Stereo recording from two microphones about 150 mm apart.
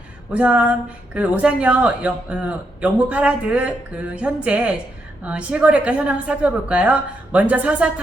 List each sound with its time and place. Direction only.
0.3 s a woman's voice: 10° right (ahead or behind)